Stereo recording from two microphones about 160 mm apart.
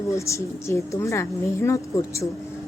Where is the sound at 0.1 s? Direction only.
20° left (ahead or behind).